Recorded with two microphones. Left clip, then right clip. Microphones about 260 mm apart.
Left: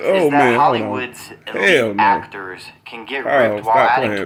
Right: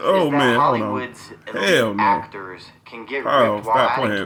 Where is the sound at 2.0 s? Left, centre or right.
Left.